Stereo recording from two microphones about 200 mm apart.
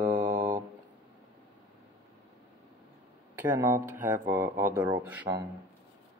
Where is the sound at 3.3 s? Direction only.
15° right (ahead or behind).